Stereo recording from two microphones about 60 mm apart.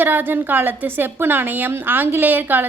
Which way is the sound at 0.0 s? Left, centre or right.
Right.